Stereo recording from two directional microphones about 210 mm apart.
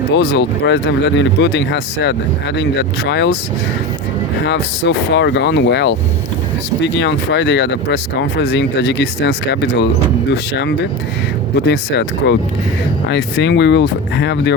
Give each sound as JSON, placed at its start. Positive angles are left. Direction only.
{"t": 0.1, "sound": "speech", "side_deg": 55}
{"t": 4.4, "sound": "speech", "side_deg": 55}